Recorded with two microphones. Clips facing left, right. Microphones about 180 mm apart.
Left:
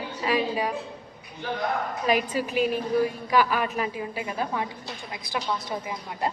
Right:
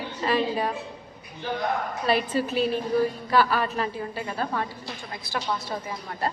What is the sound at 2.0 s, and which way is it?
A woman's voice, 10° left (ahead or behind).